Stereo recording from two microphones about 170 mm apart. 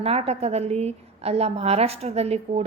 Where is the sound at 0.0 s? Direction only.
35° right (ahead or behind).